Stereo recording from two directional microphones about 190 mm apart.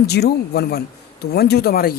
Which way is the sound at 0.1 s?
55° left (ahead or behind).